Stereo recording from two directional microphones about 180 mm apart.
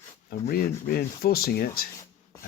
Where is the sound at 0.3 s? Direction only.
55° left (ahead or behind).